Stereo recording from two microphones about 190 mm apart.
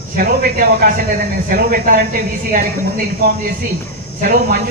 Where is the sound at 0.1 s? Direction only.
45° right (ahead or behind).